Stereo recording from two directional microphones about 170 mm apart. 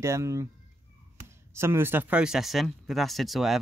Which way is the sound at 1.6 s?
15° right (ahead or behind).